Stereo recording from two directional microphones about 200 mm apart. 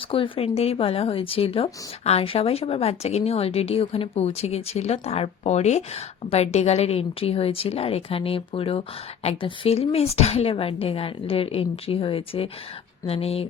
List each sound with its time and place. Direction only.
0.1 s speech: 30° left (ahead or behind)